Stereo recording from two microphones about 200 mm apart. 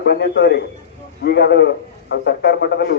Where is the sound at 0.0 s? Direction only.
60° left (ahead or behind).